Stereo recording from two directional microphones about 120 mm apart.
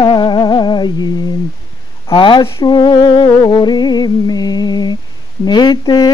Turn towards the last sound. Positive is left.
turn(degrees=35)  # may be behind; listen again after turning